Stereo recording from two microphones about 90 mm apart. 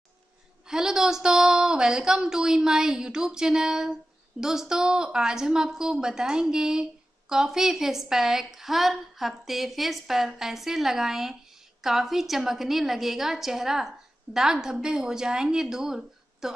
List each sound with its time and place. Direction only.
0.7 s a woman's voice: 5° right (ahead or behind)